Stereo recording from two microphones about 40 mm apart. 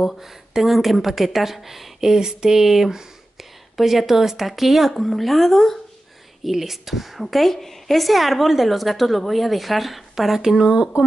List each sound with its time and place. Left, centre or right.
0.0 s speech: centre
6.4 s speech: centre
10.6 s speech: centre